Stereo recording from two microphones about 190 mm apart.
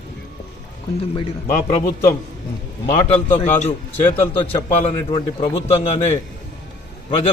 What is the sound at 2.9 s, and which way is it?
A man's voice, 30° left (ahead or behind).